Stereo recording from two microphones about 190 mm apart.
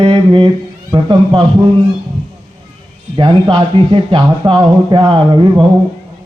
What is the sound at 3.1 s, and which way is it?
Speech, 25° right (ahead or behind).